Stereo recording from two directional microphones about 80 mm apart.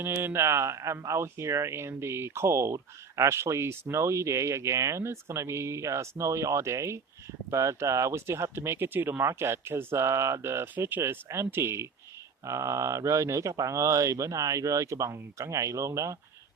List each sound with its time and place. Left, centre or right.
0.0 s speech: right